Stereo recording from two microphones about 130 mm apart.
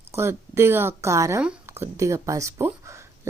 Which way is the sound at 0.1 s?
20° right (ahead or behind).